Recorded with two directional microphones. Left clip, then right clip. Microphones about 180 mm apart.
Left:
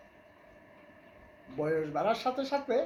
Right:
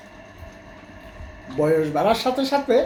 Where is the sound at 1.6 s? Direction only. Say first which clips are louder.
Right 11 dB; 5° right (ahead or behind).